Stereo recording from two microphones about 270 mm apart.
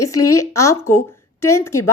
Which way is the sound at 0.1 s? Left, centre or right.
Left.